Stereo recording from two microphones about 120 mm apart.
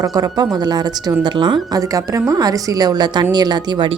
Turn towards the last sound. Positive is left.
turn(degrees=-40)  # may be behind; listen again after turning